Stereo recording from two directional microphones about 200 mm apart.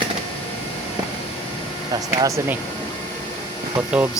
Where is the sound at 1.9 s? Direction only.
20° right (ahead or behind).